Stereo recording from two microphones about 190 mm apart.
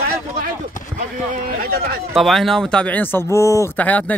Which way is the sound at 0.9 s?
50° right (ahead or behind).